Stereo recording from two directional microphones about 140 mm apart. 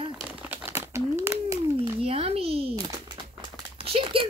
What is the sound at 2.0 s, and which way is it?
Speech, 45° right (ahead or behind).